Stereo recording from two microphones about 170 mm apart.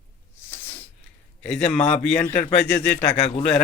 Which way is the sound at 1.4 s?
5° left (ahead or behind).